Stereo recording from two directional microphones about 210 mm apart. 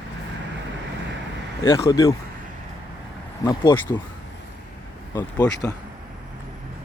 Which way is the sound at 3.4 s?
20° left (ahead or behind).